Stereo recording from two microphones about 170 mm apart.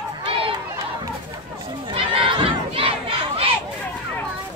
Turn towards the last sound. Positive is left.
turn(degrees=-35)  # may be behind; listen again after turning